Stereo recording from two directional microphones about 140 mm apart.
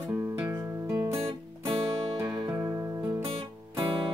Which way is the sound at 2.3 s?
25° right (ahead or behind).